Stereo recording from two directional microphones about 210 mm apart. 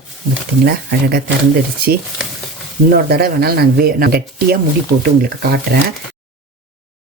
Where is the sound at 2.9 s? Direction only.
45° right (ahead or behind).